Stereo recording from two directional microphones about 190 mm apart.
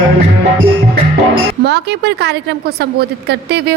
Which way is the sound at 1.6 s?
60° right (ahead or behind).